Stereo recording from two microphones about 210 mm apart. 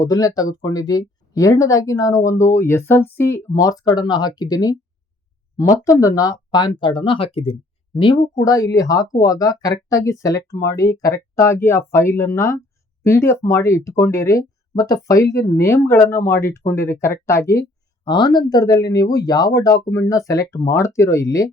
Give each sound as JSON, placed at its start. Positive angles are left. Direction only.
{"t": 0.0, "sound": "speech", "side_deg": 15}